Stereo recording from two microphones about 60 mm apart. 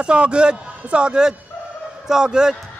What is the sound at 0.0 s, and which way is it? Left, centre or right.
A man's voice, centre.